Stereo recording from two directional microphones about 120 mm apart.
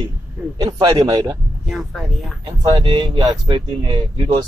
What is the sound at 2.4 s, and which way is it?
Speech, 40° right (ahead or behind).